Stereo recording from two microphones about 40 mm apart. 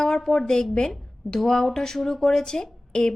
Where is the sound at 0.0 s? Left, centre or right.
Centre.